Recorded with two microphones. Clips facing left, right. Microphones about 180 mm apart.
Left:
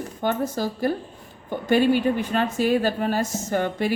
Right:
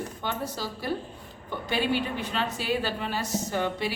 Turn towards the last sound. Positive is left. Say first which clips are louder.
# left 4 dB
turn(degrees=50)  # may be behind; listen again after turning